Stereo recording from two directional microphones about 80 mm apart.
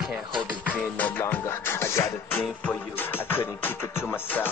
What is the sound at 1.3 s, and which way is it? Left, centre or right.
Music, left.